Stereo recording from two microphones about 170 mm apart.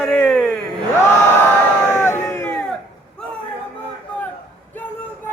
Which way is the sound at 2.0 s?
20° left (ahead or behind).